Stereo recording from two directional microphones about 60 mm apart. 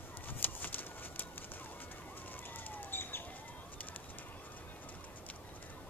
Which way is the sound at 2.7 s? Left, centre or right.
Left.